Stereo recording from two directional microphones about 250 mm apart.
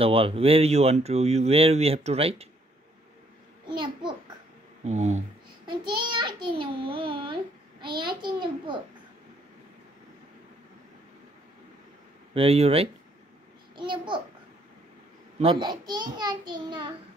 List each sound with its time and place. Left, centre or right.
0.0 s speech: right
3.6 s a sound: centre
4.8 s speech: right
12.4 s speech: right
15.6 s a child's voice: centre